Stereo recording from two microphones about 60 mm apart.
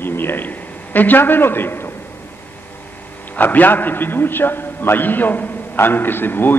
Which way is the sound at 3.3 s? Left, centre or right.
Left.